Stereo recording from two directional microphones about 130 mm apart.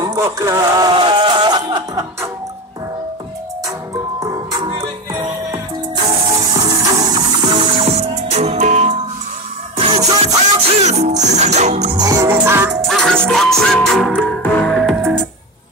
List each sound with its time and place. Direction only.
0.0 s speech: 25° right (ahead or behind)
4.2 s music: 30° right (ahead or behind); by 8.9 s 65° right (ahead or behind)
9.8 s music: 35° right (ahead or behind)
10.8 s music: 60° right (ahead or behind)
12.0 s music: 30° right (ahead or behind)
12.8 s music: 5° left (ahead or behind)